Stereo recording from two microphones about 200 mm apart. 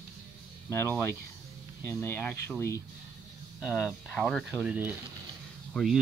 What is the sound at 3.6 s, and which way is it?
Speech, 5° right (ahead or behind).